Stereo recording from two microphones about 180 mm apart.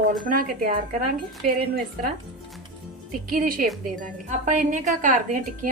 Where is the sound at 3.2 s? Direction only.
55° right (ahead or behind).